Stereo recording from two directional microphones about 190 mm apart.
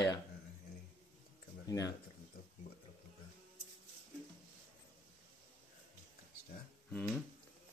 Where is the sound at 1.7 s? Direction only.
20° left (ahead or behind).